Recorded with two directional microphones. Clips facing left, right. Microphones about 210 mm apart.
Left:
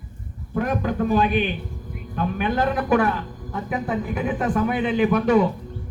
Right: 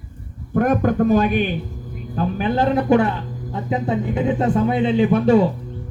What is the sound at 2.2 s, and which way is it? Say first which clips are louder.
A man's voice: right 3 dB; 30° right (ahead or behind).